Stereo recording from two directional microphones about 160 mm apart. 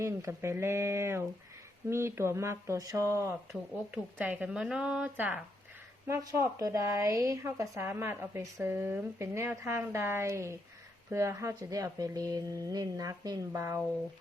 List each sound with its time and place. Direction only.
0.0 s a woman's voice: 15° right (ahead or behind)